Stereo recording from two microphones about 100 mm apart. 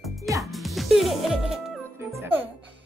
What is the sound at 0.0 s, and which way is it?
Music, centre (ahead or behind).